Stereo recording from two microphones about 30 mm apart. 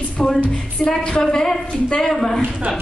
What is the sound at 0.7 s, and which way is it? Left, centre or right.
A woman's voice, left.